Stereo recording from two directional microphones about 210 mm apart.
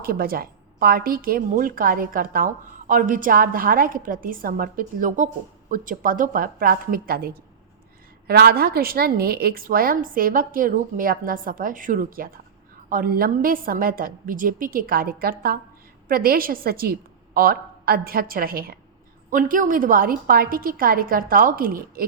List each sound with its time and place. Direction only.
0.0 s speech: 45° right (ahead or behind)